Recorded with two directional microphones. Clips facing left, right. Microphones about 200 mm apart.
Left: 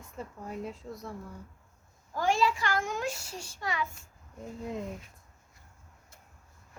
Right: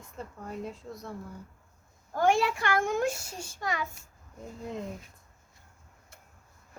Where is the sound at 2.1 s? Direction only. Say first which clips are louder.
Right 2 dB; 60° right (ahead or behind).